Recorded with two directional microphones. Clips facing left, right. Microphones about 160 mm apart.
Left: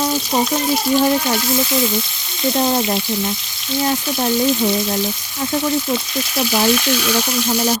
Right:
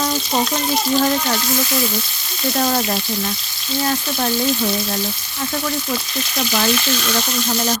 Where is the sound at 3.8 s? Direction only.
15° left (ahead or behind).